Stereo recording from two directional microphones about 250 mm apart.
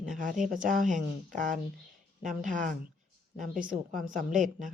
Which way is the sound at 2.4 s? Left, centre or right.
Right.